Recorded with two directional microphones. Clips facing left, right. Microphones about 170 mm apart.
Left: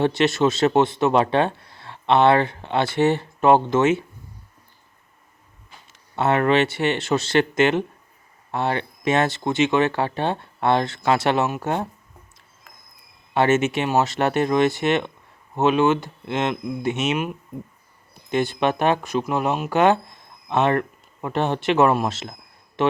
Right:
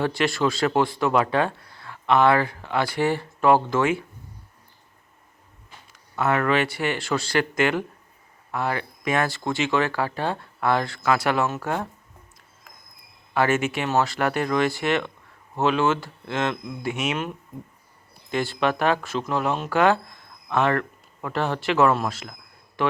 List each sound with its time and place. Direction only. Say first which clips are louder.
0.0 s speech: left 4 dB; 20° left (ahead or behind)
5.9 s speech: left 3 dB; 25° left (ahead or behind)
13.3 s speech: left 3 dB; 25° left (ahead or behind)